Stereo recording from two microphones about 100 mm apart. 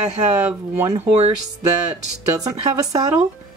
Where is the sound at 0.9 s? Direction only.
90° right.